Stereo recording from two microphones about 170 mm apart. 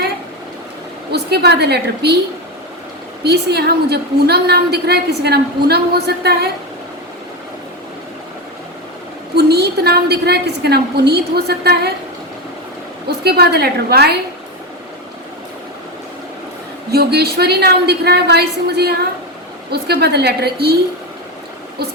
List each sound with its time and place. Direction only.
1.1 s a woman's voice: 75° right (ahead or behind)
3.2 s a woman's voice: 70° right (ahead or behind)
9.3 s a woman's voice: 70° right (ahead or behind)
13.1 s a woman's voice: 70° right (ahead or behind)
16.9 s a woman's voice: 70° right (ahead or behind)